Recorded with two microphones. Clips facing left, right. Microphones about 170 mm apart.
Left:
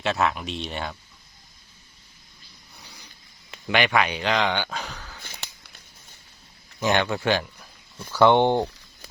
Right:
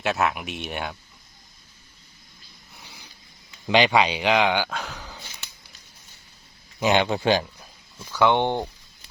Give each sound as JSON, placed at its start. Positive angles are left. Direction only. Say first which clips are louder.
{"t": 0.0, "sound": "speech", "louder": "even", "side_deg": -5}
{"t": 3.7, "sound": "speech", "louder": "right 4 dB", "side_deg": -30}
{"t": 3.9, "sound": "speech", "louder": "right 3 dB", "side_deg": -15}
{"t": 6.7, "sound": "speech", "louder": "right 2 dB", "side_deg": -15}
{"t": 8.3, "sound": "speech", "louder": "left 5 dB", "side_deg": 15}